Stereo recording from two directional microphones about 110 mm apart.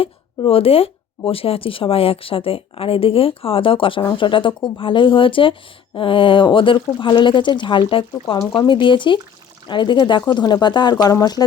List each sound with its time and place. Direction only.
0.0 s speech: 60° left (ahead or behind); by 11.4 s 35° left (ahead or behind)